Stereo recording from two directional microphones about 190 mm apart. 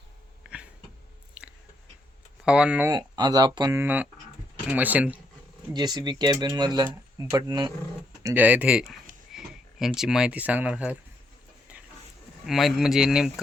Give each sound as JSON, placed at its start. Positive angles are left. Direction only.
{"t": 0.4, "sound": "a sound", "side_deg": -5}
{"t": 1.4, "sound": "chewing", "side_deg": -5}
{"t": 2.4, "sound": "speech", "side_deg": -5}
{"t": 2.9, "sound": "speech", "side_deg": -20}
{"t": 5.7, "sound": "speech", "side_deg": -20}
{"t": 8.2, "sound": "speech", "side_deg": -10}
{"t": 11.7, "sound": "a sound", "side_deg": -5}
{"t": 12.5, "sound": "speech", "side_deg": 0}